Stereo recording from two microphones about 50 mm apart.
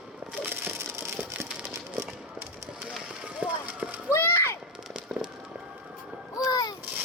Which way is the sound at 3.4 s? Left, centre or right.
Right.